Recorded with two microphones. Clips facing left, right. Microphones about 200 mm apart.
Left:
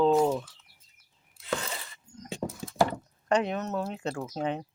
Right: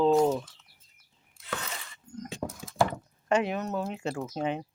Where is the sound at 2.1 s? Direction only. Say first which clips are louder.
Right 8 dB; 55° right (ahead or behind).